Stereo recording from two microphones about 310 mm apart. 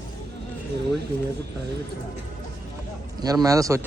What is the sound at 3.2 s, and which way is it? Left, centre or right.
Speech, centre.